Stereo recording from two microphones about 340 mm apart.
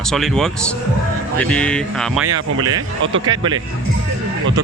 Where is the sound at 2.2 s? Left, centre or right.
Right.